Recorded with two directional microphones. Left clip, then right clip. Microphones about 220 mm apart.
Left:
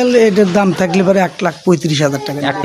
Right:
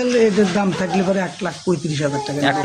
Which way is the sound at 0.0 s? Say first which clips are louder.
Left 6 dB; 45° left (ahead or behind).